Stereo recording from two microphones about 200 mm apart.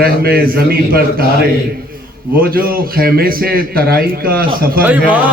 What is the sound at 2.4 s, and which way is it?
A man's voice, 50° right (ahead or behind).